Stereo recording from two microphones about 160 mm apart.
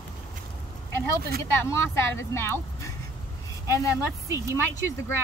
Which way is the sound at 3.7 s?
20° left (ahead or behind).